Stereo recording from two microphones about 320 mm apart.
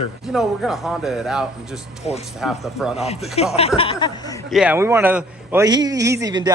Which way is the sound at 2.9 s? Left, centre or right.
Centre.